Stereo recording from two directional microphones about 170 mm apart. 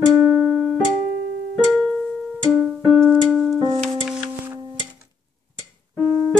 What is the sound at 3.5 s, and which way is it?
Music, 30° right (ahead or behind).